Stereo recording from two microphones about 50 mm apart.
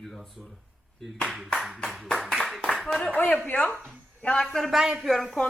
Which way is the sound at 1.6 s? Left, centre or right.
Centre.